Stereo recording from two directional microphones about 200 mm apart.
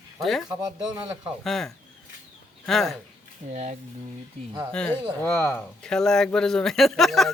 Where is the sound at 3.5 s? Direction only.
35° right (ahead or behind).